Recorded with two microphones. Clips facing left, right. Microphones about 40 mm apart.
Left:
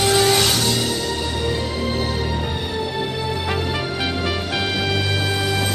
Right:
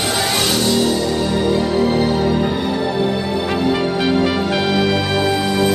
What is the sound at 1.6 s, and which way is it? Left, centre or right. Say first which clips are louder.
Music: right 7 dB; right.